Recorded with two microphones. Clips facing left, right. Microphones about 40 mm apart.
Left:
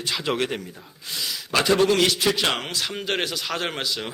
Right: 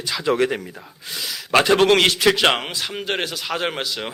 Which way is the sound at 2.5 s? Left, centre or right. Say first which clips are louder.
Right 2 dB; centre.